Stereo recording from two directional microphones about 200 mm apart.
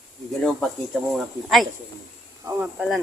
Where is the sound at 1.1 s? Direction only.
Centre (ahead or behind).